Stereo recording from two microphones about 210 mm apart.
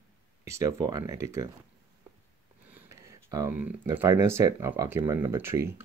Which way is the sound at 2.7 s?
15° right (ahead or behind).